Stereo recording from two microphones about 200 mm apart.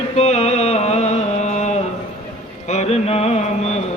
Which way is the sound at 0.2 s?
35° left (ahead or behind).